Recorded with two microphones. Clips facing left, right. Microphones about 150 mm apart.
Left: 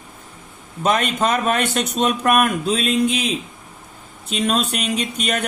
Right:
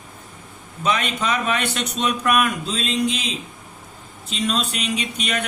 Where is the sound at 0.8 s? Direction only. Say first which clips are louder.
Left 4 dB; 45° left (ahead or behind).